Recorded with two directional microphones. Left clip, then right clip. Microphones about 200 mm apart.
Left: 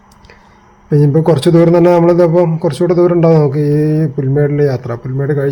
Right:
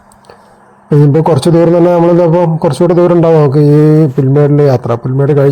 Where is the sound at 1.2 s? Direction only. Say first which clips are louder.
Right 2 dB; 10° right (ahead or behind).